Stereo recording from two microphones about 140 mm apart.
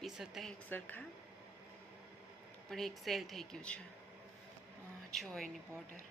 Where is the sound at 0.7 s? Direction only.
15° left (ahead or behind).